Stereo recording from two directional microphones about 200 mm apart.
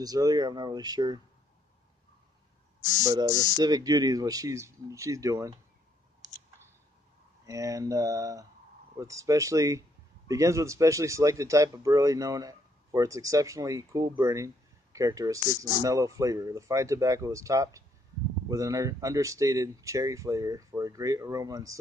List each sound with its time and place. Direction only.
0.0 s speech: 20° right (ahead or behind)
3.1 s speech: 20° right (ahead or behind)
7.4 s speech: 15° right (ahead or behind)